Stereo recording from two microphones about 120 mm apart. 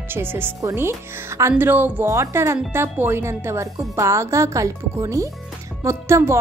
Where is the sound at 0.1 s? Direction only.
20° right (ahead or behind).